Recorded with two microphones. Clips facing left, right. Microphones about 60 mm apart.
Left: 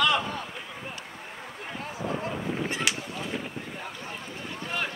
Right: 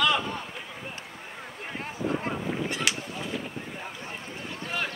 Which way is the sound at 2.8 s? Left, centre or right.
Centre.